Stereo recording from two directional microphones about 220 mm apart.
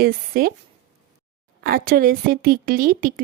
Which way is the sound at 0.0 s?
40° right (ahead or behind).